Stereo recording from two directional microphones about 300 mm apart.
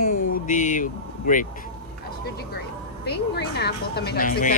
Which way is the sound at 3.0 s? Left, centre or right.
Left.